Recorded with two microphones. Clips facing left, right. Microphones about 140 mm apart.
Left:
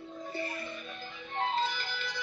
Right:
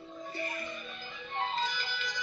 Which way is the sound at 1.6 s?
60° left (ahead or behind).